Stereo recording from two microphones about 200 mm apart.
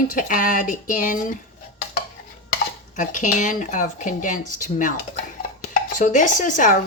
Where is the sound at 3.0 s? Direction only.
40° left (ahead or behind).